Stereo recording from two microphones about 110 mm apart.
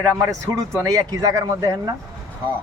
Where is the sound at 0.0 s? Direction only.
30° right (ahead or behind).